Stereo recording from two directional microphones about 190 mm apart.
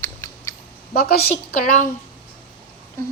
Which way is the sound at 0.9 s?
55° left (ahead or behind).